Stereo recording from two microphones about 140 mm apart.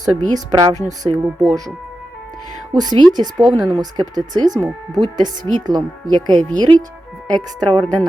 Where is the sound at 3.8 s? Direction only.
30° right (ahead or behind).